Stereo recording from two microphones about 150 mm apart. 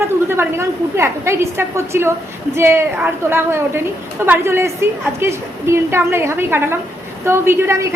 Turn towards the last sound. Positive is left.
turn(degrees=-15)  # may be behind; listen again after turning